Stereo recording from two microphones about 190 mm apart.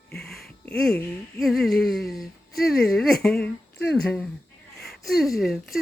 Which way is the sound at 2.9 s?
Centre (ahead or behind).